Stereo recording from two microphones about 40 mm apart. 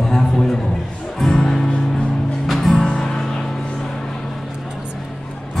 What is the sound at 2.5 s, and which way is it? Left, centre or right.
Music, centre.